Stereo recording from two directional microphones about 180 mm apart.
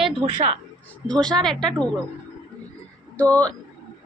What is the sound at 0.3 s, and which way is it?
Speech, 35° right (ahead or behind).